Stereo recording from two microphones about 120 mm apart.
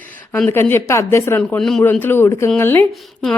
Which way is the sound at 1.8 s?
15° left (ahead or behind).